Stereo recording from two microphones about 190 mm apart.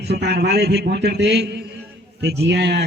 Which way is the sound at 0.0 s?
60° right (ahead or behind).